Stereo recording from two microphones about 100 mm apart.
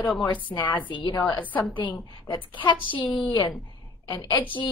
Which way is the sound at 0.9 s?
50° left (ahead or behind).